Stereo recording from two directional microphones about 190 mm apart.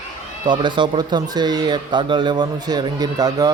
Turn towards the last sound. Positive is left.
turn(degrees=-20)  # may be behind; listen again after turning